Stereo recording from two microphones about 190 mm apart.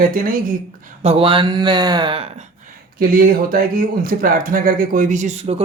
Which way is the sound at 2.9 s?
50° right (ahead or behind).